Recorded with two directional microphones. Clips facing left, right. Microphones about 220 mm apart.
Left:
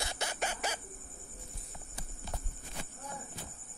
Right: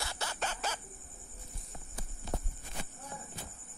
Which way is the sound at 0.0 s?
20° left (ahead or behind).